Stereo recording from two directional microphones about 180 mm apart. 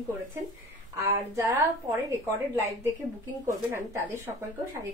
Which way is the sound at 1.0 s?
15° right (ahead or behind).